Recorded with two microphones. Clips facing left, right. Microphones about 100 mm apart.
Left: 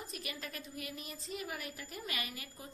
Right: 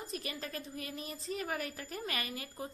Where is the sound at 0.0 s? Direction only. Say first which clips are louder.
Right 4 dB; 35° right (ahead or behind).